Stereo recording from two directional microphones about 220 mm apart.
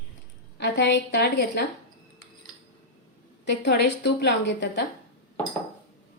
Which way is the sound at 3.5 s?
50° left (ahead or behind).